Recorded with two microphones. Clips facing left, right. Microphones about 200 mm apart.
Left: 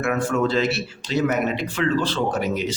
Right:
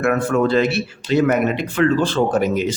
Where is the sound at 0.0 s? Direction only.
55° right (ahead or behind).